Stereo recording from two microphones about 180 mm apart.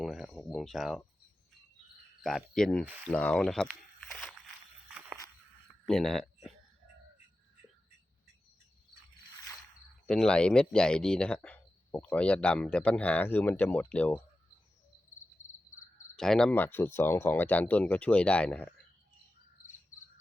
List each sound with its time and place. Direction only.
0.0 s speech: centre (ahead or behind)
2.2 s speech: centre (ahead or behind)
2.8 s speech: 10° right (ahead or behind)
3.1 s speech: 5° left (ahead or behind)
4.9 s walk: 5° right (ahead or behind)
5.8 s speech: centre (ahead or behind)
10.1 s speech: 5° left (ahead or behind)
15.4 s crow: 45° left (ahead or behind)
16.1 s speech: 5° left (ahead or behind)